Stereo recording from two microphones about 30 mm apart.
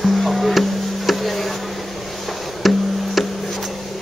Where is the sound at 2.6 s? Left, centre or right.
Centre.